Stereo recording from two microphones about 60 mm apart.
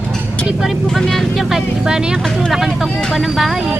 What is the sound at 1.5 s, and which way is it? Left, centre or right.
Speech, centre.